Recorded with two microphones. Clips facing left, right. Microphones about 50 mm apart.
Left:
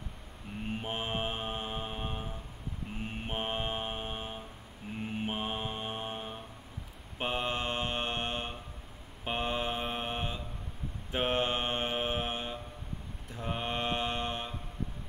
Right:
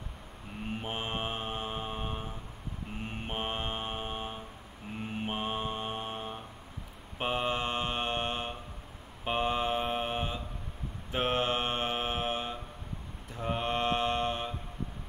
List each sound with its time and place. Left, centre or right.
0.7 s mantra: centre